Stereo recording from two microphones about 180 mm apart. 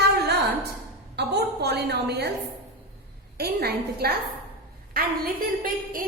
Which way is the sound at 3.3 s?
60° right (ahead or behind).